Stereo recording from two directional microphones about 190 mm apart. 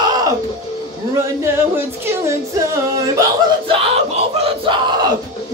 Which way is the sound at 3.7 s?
30° right (ahead or behind).